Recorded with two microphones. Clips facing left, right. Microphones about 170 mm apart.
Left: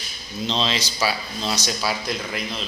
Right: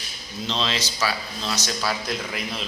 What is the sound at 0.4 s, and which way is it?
Speech, 20° left (ahead or behind).